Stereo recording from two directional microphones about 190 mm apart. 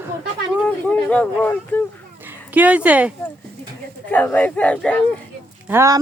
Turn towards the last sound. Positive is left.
turn(degrees=-15)  # may be behind; listen again after turning